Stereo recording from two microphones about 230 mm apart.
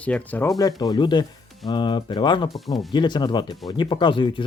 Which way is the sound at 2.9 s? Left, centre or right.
Centre.